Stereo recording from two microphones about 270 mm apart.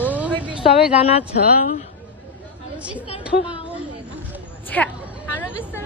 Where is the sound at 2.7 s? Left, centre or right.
Centre.